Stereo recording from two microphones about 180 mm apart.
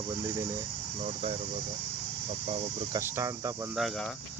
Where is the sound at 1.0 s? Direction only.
40° right (ahead or behind).